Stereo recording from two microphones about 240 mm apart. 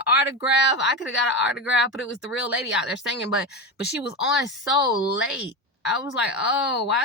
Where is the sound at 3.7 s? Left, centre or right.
Left.